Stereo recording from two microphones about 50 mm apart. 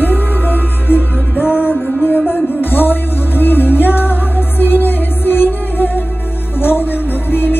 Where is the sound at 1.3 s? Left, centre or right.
Right.